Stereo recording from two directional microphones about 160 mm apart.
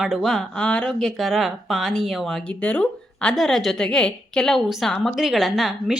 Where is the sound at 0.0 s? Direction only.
Centre (ahead or behind).